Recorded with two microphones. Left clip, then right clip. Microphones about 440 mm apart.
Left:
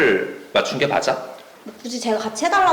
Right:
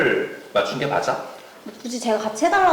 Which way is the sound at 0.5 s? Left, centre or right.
Left.